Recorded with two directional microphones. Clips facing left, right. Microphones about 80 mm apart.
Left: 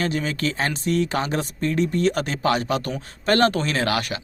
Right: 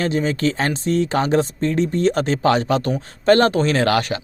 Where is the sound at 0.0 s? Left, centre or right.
Right.